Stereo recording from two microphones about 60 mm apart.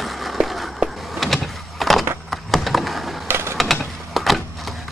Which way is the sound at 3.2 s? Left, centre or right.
Right.